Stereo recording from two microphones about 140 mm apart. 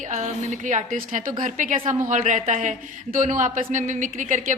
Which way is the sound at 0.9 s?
75° right (ahead or behind).